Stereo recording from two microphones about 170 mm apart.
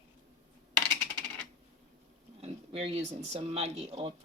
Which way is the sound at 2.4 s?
35° right (ahead or behind).